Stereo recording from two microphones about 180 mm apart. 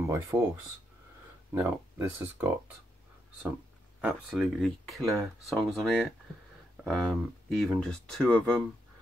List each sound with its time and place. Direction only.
0.0 s speech: 15° right (ahead or behind)
1.5 s speech: 15° right (ahead or behind)
4.0 s speech: centre (ahead or behind)